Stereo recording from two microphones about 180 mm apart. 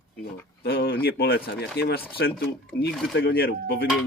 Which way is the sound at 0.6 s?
60° left (ahead or behind).